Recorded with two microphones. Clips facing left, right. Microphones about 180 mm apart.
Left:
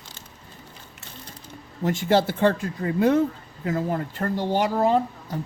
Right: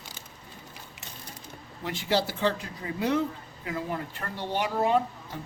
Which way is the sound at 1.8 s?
45° left (ahead or behind).